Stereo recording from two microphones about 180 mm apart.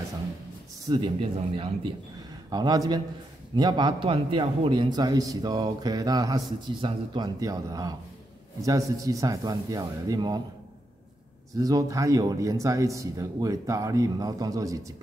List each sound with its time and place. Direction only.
0.8 s a man's voice: 25° right (ahead or behind)
11.5 s a man's voice: 20° right (ahead or behind)